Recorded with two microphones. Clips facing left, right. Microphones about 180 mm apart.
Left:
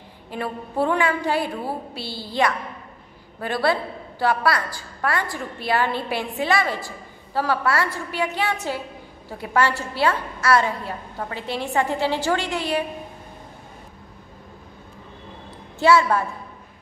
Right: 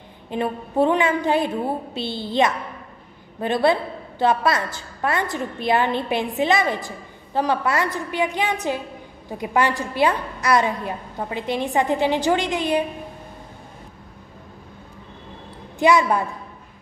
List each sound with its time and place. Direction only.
0.3 s a woman's voice: 20° right (ahead or behind)
15.8 s a woman's voice: 15° right (ahead or behind)